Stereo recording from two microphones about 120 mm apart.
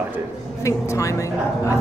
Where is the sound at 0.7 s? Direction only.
25° left (ahead or behind).